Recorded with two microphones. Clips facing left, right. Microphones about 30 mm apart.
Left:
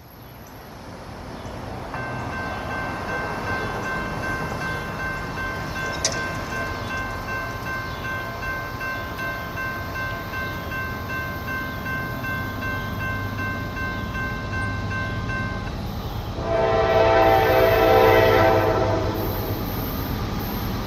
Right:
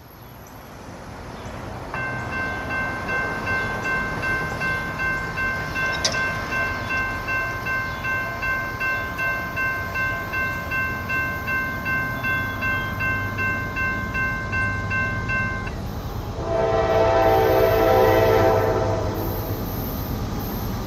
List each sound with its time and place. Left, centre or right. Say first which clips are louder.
2.7 s train: right 3 dB; right
4.2 s train: right 3 dB; right
5.9 s train: right 3 dB; right
10.7 s train: right 4 dB; right
14.1 s train: right 4 dB; right
16.4 s train: left 1 dB; left